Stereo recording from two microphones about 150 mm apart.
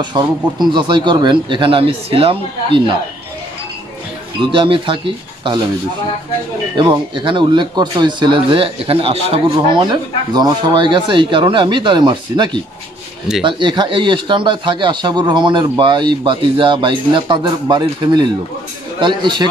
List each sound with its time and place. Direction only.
0.2 s a man's voice: 30° right (ahead or behind)
4.4 s a man's voice: 35° right (ahead or behind)
6.8 s a man's voice: 30° right (ahead or behind)
9.8 s a man's voice: 30° right (ahead or behind)